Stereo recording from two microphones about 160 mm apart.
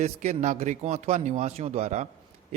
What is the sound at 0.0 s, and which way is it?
Speech, 45° right (ahead or behind).